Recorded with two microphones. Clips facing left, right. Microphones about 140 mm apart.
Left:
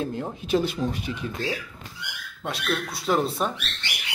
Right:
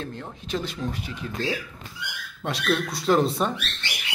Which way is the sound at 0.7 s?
20° left (ahead or behind).